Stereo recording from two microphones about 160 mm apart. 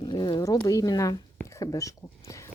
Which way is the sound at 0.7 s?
20° left (ahead or behind).